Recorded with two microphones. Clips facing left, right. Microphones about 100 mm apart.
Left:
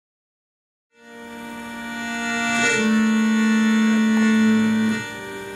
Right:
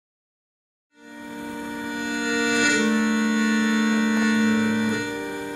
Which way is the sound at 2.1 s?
15° right (ahead or behind).